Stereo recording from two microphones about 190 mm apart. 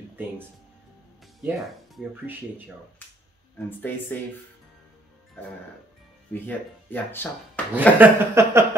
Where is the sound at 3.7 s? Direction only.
10° left (ahead or behind).